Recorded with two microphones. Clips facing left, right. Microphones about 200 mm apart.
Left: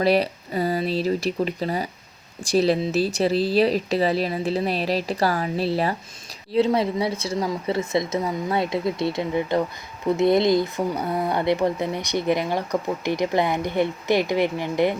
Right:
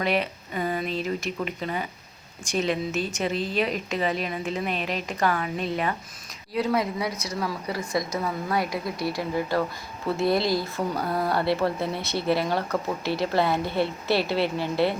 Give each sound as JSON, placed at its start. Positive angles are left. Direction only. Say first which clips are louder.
{"t": 0.0, "sound": "speech", "louder": "left 6 dB", "side_deg": 35}